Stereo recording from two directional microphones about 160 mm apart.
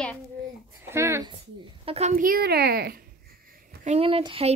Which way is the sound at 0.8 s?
15° right (ahead or behind).